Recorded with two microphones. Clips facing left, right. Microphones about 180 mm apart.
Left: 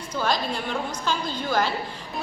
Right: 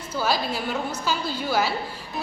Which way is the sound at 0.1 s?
5° right (ahead or behind).